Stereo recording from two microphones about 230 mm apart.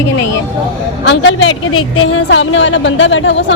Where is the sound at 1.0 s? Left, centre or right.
Left.